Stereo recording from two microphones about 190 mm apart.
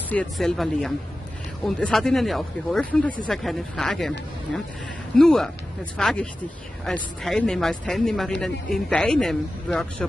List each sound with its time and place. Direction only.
0.1 s speech: 5° left (ahead or behind)
5.1 s speech: 5° left (ahead or behind)